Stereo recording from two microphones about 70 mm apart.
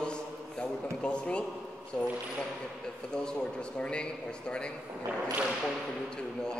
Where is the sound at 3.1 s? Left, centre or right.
Centre.